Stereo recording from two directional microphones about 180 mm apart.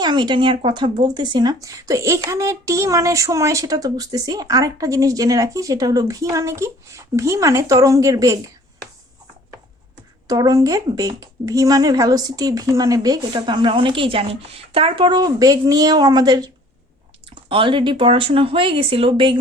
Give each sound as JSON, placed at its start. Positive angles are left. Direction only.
{"t": 0.0, "sound": "speech", "side_deg": -25}
{"t": 10.2, "sound": "speech", "side_deg": -20}